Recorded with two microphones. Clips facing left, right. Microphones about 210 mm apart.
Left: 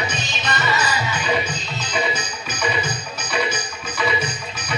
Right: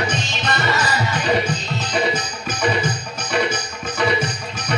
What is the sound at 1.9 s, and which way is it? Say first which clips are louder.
Music: right 3 dB; 45° right (ahead or behind).